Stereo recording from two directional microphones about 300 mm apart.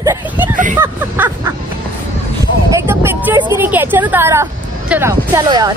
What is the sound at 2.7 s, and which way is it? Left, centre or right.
Speech, centre.